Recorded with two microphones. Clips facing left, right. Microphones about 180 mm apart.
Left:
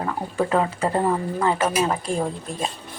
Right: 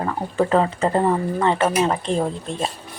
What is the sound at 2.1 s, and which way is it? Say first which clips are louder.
Speech: right 3 dB; 25° right (ahead or behind).